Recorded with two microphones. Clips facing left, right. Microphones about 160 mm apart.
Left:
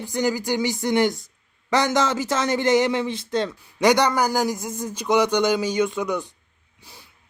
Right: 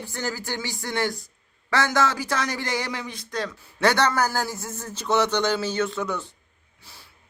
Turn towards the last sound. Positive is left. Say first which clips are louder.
# left 3 dB
turn(degrees=15)  # may be behind; listen again after turning